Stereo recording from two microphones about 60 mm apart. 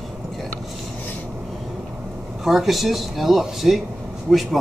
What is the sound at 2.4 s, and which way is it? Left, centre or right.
Speech, centre.